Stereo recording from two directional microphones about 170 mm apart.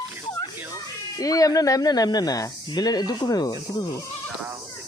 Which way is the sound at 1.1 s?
20° left (ahead or behind).